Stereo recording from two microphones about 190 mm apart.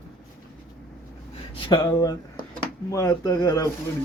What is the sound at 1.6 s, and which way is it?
Speech, 25° left (ahead or behind).